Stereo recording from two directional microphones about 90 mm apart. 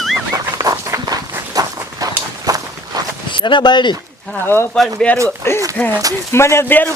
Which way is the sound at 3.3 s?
60° left (ahead or behind).